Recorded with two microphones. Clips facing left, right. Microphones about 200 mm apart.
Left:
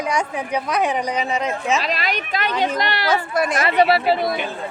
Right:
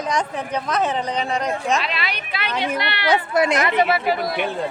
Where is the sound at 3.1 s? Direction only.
20° right (ahead or behind).